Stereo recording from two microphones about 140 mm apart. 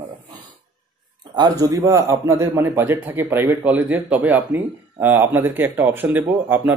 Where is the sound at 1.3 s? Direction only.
30° right (ahead or behind).